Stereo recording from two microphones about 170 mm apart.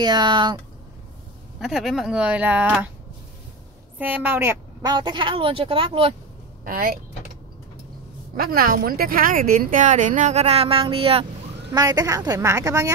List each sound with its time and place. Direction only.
0.0 s a woman's voice: 25° right (ahead or behind)
1.6 s speech: centre (ahead or behind)
4.0 s a woman's voice: 10° right (ahead or behind); by 6.1 s 35° right (ahead or behind)
6.6 s speech: 60° right (ahead or behind)
8.4 s speech: 60° right (ahead or behind); by 11.2 s 35° right (ahead or behind)
11.7 s a woman's voice: 20° right (ahead or behind)